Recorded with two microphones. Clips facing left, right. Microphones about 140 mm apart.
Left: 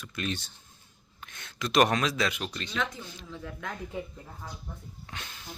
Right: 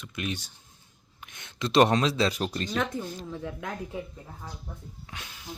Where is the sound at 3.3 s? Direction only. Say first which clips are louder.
Right 4 dB; 20° right (ahead or behind).